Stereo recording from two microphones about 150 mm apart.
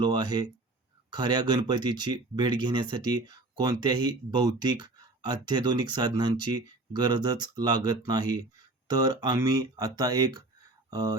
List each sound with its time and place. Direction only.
0.0 s speech: 30° right (ahead or behind)